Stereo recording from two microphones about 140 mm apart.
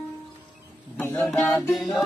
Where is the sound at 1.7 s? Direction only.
Centre (ahead or behind).